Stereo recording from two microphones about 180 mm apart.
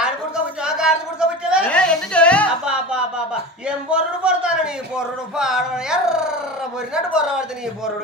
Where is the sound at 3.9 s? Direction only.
5° right (ahead or behind).